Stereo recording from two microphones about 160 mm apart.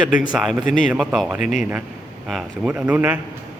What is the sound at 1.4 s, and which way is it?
Speech, 50° left (ahead or behind).